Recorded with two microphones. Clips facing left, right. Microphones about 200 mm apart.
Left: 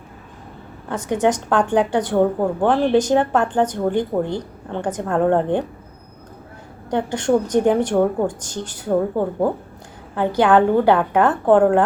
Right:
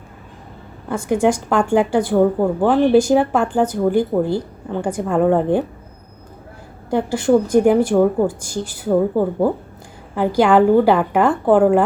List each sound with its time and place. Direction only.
0.9 s a woman's voice: 10° right (ahead or behind)
6.9 s a woman's voice: 5° right (ahead or behind)